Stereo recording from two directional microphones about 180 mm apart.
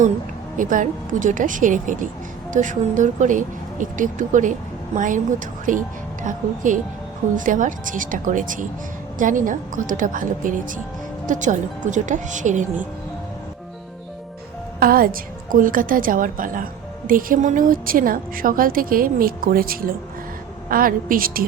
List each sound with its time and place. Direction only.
0.5 s a woman's voice: 45° right (ahead or behind)
14.8 s a woman's voice: 55° right (ahead or behind)